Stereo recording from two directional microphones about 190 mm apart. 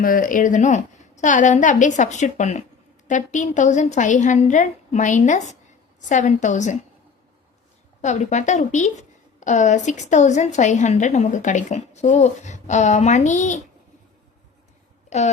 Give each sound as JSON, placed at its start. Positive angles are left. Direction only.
{"t": 0.0, "sound": "a woman's voice", "side_deg": 45}
{"t": 8.0, "sound": "a woman's voice", "side_deg": 40}
{"t": 15.1, "sound": "a woman's voice", "side_deg": 35}